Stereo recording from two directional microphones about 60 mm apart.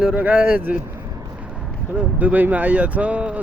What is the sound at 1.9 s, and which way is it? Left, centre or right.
Speech, right.